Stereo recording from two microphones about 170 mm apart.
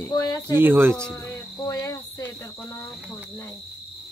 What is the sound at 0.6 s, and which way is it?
Speech, 15° right (ahead or behind).